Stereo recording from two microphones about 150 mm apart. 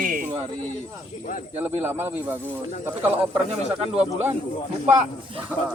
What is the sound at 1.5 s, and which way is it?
Speech, 15° right (ahead or behind).